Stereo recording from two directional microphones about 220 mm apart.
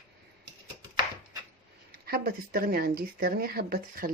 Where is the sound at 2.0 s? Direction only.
45° right (ahead or behind).